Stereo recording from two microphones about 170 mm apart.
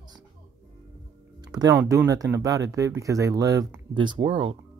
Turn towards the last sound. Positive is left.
turn(degrees=-30)  # may be behind; listen again after turning